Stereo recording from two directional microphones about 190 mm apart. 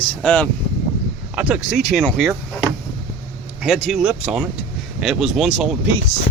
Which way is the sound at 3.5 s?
5° right (ahead or behind).